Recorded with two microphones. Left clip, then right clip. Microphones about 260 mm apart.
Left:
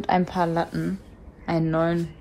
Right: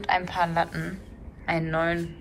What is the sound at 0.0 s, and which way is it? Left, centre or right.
A woman's voice, left.